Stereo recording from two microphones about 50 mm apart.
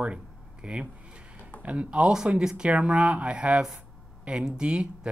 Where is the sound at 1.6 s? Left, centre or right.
Right.